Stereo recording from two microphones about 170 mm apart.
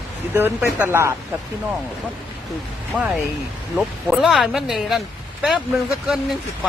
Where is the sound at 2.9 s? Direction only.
10° right (ahead or behind).